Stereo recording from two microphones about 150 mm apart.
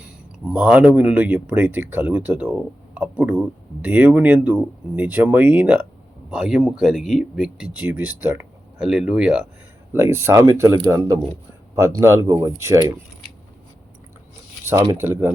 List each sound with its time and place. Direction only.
0.4 s speech: 10° right (ahead or behind)
14.6 s a sound: 15° right (ahead or behind)
15.0 s speech: 15° right (ahead or behind)